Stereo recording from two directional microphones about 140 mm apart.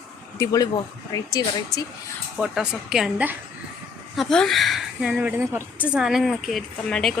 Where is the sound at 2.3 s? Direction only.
5° right (ahead or behind).